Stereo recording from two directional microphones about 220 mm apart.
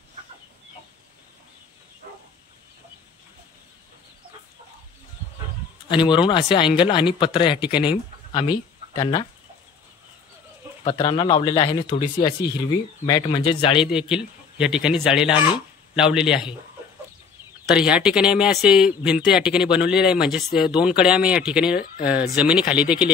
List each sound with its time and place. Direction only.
6.0 s speech: 20° left (ahead or behind)
10.8 s speech: 25° left (ahead or behind)
13.7 s speech: 5° right (ahead or behind)
17.6 s speech: 5° right (ahead or behind)